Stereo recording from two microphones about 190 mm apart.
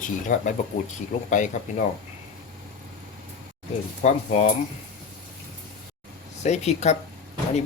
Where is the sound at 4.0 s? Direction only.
35° left (ahead or behind).